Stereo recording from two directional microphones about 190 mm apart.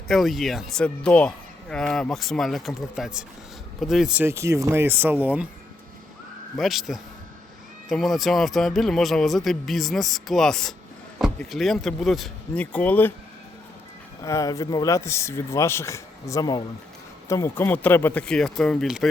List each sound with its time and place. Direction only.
0.1 s speech: centre (ahead or behind)
6.6 s speech: centre (ahead or behind)
14.2 s speech: 15° left (ahead or behind); by 19.0 s centre (ahead or behind)